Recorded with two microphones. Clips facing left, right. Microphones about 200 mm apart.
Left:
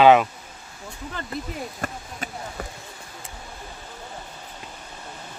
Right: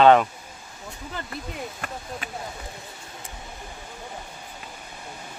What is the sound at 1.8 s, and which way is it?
Speech, 40° left (ahead or behind).